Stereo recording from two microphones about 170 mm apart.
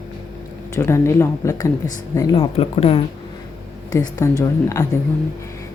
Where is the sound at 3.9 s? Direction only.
15° left (ahead or behind).